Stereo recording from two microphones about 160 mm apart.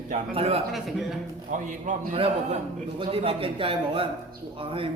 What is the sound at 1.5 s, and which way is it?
Speech, 50° right (ahead or behind).